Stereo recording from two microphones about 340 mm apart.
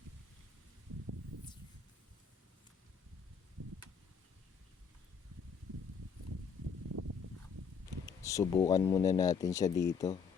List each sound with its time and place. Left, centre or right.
8.0 s speech: centre